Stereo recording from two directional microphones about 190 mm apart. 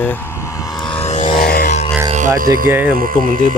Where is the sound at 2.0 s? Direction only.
40° right (ahead or behind).